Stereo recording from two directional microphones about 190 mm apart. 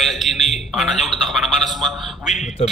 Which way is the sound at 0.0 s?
Centre (ahead or behind).